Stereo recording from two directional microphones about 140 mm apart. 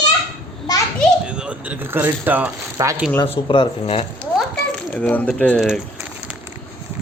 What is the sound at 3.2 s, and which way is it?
Speech, 40° left (ahead or behind).